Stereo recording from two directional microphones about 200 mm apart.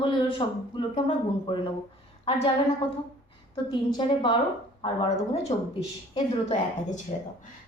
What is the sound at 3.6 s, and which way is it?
Speech, 25° left (ahead or behind).